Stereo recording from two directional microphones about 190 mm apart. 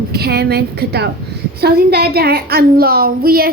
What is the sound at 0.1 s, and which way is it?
A woman's voice, 55° right (ahead or behind).